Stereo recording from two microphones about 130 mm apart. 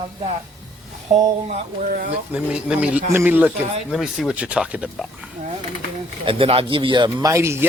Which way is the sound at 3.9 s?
5° right (ahead or behind).